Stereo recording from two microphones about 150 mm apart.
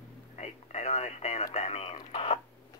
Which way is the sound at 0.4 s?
45° left (ahead or behind).